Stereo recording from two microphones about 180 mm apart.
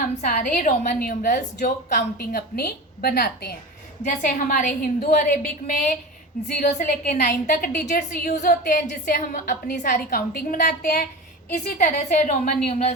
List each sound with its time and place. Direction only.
0.3 s a woman's voice: 45° left (ahead or behind)
4.0 s a woman's voice: 45° left (ahead or behind)